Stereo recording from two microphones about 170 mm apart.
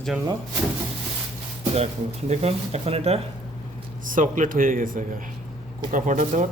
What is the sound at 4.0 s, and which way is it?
Speech, 50° right (ahead or behind).